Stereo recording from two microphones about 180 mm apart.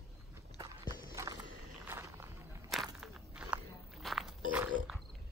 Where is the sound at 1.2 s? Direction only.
20° right (ahead or behind).